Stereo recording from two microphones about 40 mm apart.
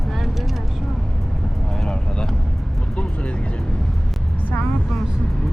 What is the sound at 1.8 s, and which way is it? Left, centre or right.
Speech, left.